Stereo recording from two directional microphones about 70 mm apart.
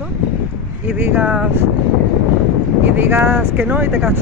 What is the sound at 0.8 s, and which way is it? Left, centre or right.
Speech, right.